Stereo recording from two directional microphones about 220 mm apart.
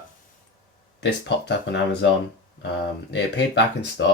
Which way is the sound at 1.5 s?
50° left (ahead or behind).